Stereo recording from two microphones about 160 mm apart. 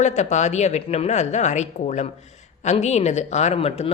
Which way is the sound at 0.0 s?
45° left (ahead or behind).